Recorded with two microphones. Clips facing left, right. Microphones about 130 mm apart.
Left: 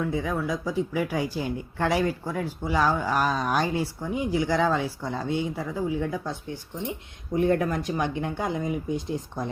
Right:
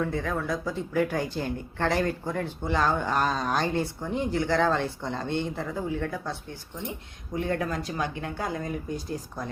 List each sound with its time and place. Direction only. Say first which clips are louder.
0.0 s speech: left 1 dB; 10° left (ahead or behind)